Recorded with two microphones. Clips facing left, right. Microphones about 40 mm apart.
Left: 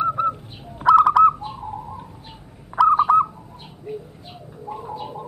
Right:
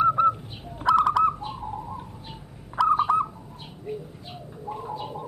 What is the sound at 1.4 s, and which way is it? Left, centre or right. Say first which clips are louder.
Bird: left 2 dB; centre.